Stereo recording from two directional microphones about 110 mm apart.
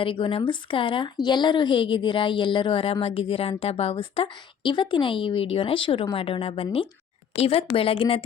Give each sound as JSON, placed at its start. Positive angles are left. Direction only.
{"t": 0.0, "sound": "a woman's voice", "side_deg": 55}